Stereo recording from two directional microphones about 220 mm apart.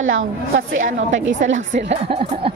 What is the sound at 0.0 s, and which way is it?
Speech, 65° right (ahead or behind).